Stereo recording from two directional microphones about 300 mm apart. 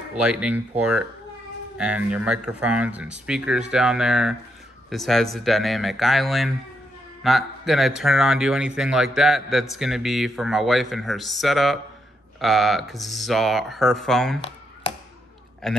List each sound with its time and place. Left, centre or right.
0.1 s a man's voice: centre
15.6 s a man's voice: centre